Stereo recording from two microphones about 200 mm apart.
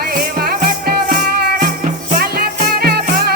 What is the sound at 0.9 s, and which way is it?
Music, 50° right (ahead or behind).